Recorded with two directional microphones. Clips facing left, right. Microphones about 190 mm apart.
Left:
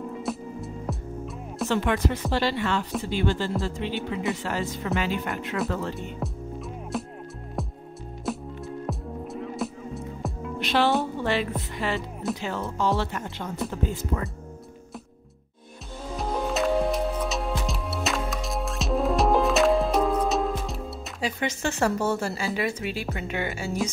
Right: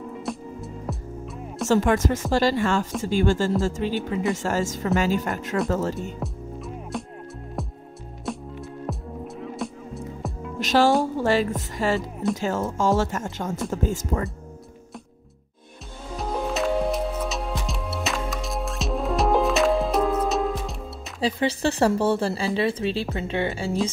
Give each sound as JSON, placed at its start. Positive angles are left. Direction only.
{"t": 0.1, "sound": "music", "side_deg": 0}
{"t": 1.7, "sound": "speech", "side_deg": -40}
{"t": 6.1, "sound": "music", "side_deg": 0}
{"t": 8.3, "sound": "music", "side_deg": 0}
{"t": 10.6, "sound": "speech", "side_deg": -40}
{"t": 16.2, "sound": "music", "side_deg": 0}
{"t": 21.2, "sound": "speech", "side_deg": -35}